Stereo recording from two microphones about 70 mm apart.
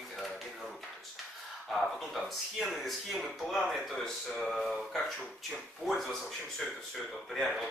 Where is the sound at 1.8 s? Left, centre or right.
Centre.